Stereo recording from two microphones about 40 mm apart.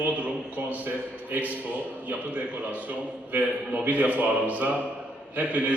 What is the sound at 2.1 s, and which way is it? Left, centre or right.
Speech, right.